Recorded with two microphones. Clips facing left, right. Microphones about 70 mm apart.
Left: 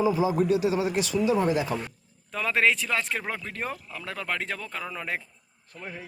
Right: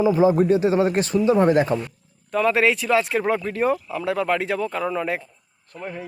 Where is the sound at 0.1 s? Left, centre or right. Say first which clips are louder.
Right 7 dB; right.